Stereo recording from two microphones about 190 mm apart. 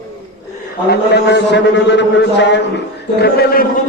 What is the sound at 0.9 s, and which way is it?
A man's voice, 65° left (ahead or behind).